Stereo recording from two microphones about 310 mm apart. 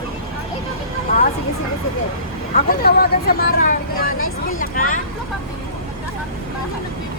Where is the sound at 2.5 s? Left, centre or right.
Left.